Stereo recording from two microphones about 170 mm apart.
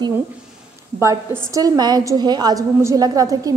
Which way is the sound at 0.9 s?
15° right (ahead or behind).